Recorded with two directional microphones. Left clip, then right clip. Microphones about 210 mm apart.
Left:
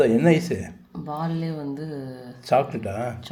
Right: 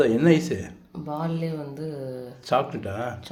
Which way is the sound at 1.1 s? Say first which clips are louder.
Even; 15° right (ahead or behind).